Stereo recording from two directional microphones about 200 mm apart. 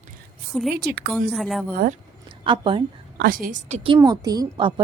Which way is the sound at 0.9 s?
55° right (ahead or behind).